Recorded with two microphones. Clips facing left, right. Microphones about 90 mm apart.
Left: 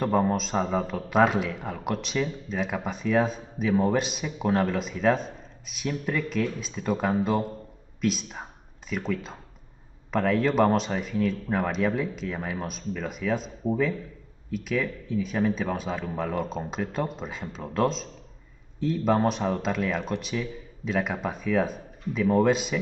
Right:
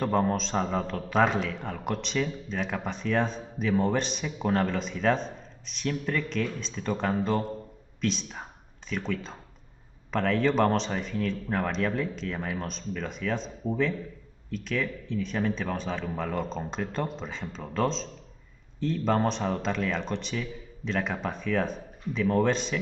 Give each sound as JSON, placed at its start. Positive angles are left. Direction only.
{"t": 0.0, "sound": "a man's voice", "side_deg": 5}